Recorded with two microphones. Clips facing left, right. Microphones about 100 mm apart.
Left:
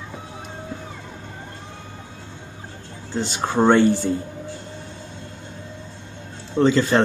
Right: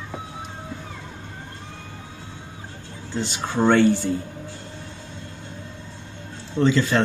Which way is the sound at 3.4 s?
40° left (ahead or behind).